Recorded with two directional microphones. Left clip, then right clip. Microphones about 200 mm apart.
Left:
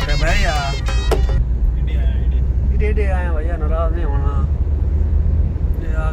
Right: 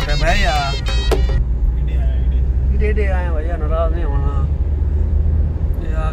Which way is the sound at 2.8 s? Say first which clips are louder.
Right 1 dB; centre (ahead or behind).